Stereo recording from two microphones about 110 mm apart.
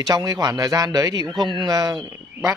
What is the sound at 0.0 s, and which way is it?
A man's voice, 35° right (ahead or behind).